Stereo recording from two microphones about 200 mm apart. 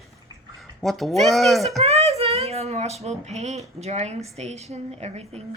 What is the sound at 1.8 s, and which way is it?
A woman's voice, 30° right (ahead or behind).